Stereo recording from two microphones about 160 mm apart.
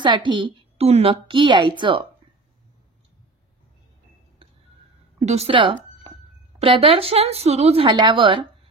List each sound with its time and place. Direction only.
0.0 s a woman's voice: 30° right (ahead or behind)
5.2 s a woman's voice: 40° right (ahead or behind)